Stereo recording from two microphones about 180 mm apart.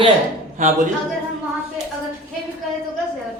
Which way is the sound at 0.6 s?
45° right (ahead or behind).